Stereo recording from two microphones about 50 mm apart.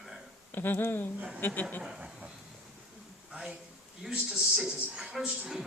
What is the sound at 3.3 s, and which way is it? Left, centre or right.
Speech, centre.